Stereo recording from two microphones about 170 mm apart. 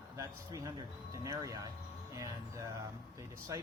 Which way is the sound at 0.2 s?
20° right (ahead or behind).